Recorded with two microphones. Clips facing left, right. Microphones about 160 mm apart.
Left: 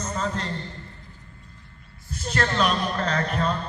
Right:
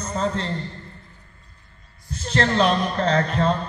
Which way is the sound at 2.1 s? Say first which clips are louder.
Right 3 dB; 10° left (ahead or behind).